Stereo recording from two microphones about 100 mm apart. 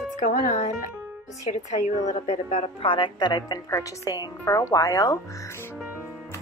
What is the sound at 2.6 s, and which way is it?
Speech, 60° left (ahead or behind).